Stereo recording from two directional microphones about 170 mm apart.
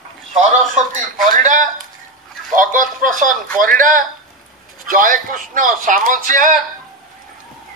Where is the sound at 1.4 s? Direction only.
50° right (ahead or behind).